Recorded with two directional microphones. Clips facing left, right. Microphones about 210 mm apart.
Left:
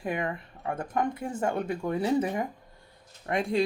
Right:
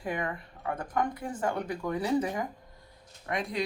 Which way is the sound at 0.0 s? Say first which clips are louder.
Left 2 dB; 25° left (ahead or behind).